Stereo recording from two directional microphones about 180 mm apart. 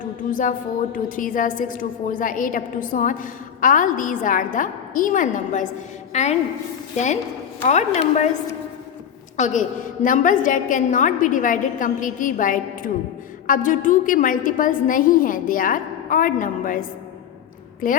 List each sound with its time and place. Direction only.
0.3 s a woman's voice: 45° left (ahead or behind)
6.9 s a woman's voice: 40° left (ahead or behind)
9.4 s a woman's voice: 45° left (ahead or behind)
17.8 s a woman's voice: 50° left (ahead or behind)